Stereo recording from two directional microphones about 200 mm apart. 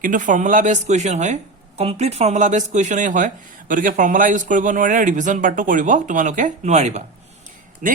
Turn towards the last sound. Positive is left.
turn(degrees=-40)  # may be behind; listen again after turning